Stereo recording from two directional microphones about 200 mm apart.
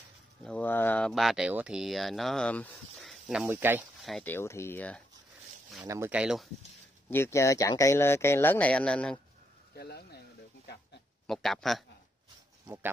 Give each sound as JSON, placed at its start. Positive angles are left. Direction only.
{"t": 0.4, "sound": "speech", "side_deg": 5}
{"t": 4.0, "sound": "speech", "side_deg": 5}
{"t": 5.9, "sound": "speech", "side_deg": -10}
{"t": 7.1, "sound": "speech", "side_deg": 10}
{"t": 9.8, "sound": "speech", "side_deg": 55}
{"t": 11.2, "sound": "speech", "side_deg": 0}
{"t": 12.6, "sound": "speech", "side_deg": -10}